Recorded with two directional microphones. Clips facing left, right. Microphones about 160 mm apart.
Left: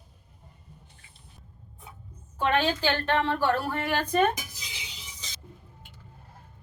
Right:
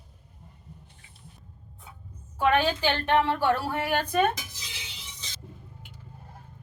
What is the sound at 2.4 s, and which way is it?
A woman's voice, 15° right (ahead or behind).